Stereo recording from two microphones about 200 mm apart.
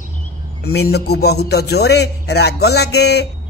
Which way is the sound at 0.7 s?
55° left (ahead or behind).